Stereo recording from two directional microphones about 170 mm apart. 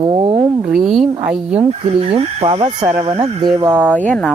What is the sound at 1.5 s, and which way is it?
Speech, 35° right (ahead or behind).